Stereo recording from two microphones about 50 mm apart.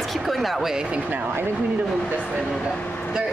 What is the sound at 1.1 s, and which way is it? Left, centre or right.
Speech, right.